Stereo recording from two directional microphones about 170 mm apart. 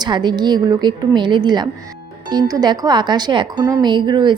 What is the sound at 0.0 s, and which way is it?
A woman's voice, 25° right (ahead or behind).